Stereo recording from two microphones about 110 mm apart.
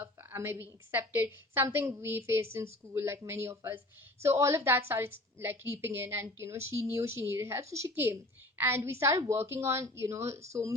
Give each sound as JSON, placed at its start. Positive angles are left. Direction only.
{"t": 0.0, "sound": "a woman's voice", "side_deg": -20}